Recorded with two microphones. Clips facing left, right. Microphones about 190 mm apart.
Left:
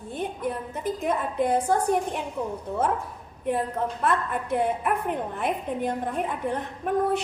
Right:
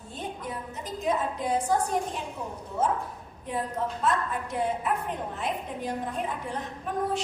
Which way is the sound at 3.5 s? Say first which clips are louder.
Left 4 dB; 60° left (ahead or behind).